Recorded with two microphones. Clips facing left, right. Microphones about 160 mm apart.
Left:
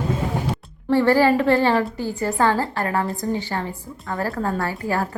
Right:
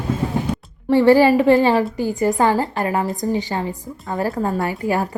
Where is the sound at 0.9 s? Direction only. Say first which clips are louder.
Right 4 dB; 15° right (ahead or behind).